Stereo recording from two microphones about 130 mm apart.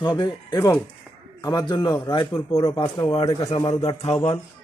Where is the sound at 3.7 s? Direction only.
55° left (ahead or behind).